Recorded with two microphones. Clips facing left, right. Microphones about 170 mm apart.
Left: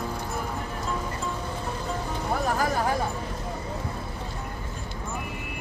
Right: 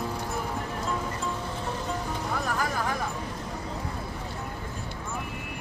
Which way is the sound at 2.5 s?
35° left (ahead or behind).